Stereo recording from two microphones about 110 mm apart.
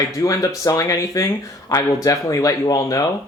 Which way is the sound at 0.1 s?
30° left (ahead or behind).